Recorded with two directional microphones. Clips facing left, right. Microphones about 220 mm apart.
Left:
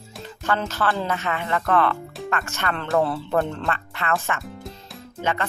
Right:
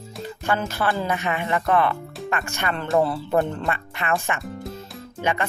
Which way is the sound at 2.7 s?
Centre (ahead or behind).